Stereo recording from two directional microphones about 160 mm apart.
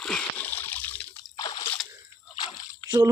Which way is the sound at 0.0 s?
5° left (ahead or behind).